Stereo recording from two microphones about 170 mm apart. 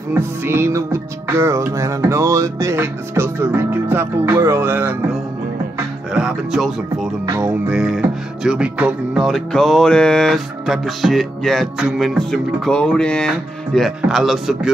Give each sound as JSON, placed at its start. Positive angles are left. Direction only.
{"t": 0.1, "sound": "music", "side_deg": -15}
{"t": 6.1, "sound": "music", "side_deg": -5}